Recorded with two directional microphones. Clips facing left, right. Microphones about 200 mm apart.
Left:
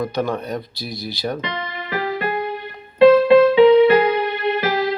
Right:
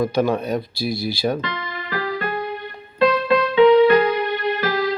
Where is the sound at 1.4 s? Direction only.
20° left (ahead or behind).